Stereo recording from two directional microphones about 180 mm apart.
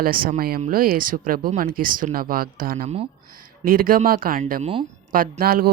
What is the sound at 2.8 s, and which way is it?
Speech, 30° right (ahead or behind).